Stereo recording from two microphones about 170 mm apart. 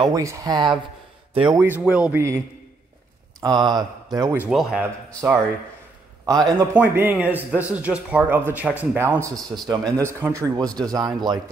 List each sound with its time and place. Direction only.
0.0 s a man's voice: 20° right (ahead or behind)
1.6 s speech: 10° right (ahead or behind)
3.3 s a man's voice: 25° right (ahead or behind)
4.5 s a man's voice: centre (ahead or behind)
6.2 s a man's voice: 20° right (ahead or behind)